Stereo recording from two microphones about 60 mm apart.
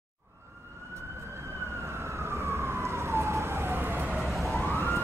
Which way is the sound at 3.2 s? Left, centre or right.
Right.